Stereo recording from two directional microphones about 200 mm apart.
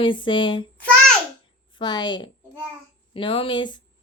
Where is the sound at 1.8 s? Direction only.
20° left (ahead or behind).